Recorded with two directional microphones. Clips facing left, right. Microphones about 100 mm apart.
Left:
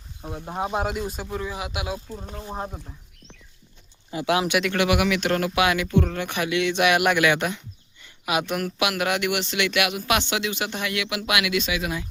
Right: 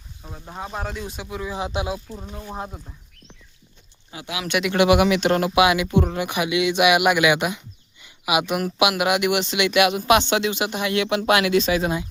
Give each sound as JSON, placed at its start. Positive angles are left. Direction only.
{"t": 0.2, "sound": "speech", "side_deg": 20}
{"t": 0.9, "sound": "speech", "side_deg": 0}
{"t": 1.5, "sound": "speech", "side_deg": -25}
{"t": 2.6, "sound": "speech", "side_deg": 0}
{"t": 4.7, "sound": "speech", "side_deg": -20}
{"t": 10.9, "sound": "speech", "side_deg": -30}